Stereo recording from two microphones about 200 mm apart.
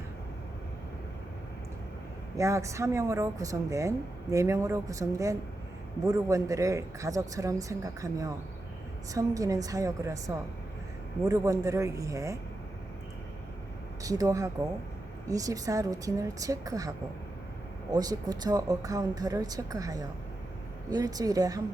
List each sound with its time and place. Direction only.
2.3 s a woman's voice: 15° right (ahead or behind)
14.0 s a woman's voice: 15° right (ahead or behind)
17.9 s a woman's voice: 20° right (ahead or behind)